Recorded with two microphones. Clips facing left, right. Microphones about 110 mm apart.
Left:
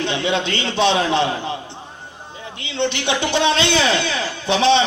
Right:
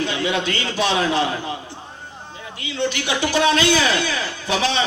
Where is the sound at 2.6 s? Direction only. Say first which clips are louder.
Left 1 dB; 25° left (ahead or behind).